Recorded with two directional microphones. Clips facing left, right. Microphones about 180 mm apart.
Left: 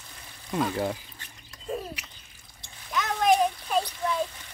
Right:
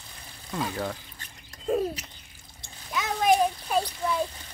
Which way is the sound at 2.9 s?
10° right (ahead or behind).